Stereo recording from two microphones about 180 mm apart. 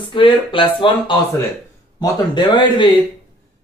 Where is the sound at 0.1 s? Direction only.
30° left (ahead or behind).